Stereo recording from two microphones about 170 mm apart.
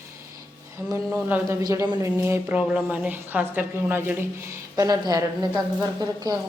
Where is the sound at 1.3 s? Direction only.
15° right (ahead or behind).